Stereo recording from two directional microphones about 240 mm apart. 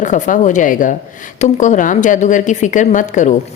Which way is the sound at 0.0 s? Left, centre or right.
Left.